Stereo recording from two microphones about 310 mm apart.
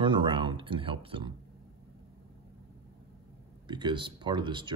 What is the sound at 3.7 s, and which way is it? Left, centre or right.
Speech, centre.